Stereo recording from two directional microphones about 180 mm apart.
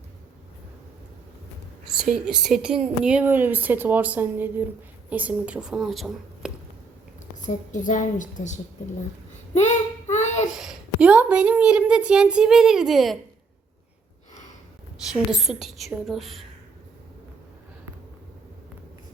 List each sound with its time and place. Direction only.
2.0 s a woman's voice: 5° right (ahead or behind)
7.4 s a woman's voice: 45° left (ahead or behind)
9.6 s a sound: 40° left (ahead or behind)
10.6 s a woman's voice: 5° right (ahead or behind)
15.1 s a woman's voice: centre (ahead or behind)